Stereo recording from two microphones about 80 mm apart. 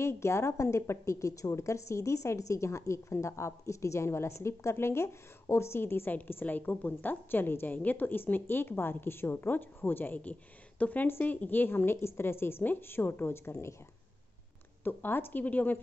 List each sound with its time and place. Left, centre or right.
0.0 s a woman's voice: left
14.8 s a woman's voice: left